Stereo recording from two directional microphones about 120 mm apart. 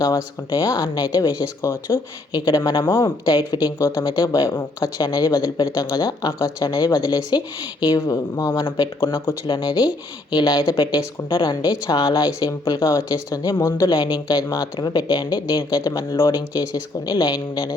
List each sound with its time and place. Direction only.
0.0 s speech: 35° left (ahead or behind)
1.6 s speech: 20° left (ahead or behind)
2.3 s speech: 35° left (ahead or behind)
3.8 s speech: 20° left (ahead or behind)
4.0 s speech: 35° left (ahead or behind)
13.9 s speech: 40° left (ahead or behind)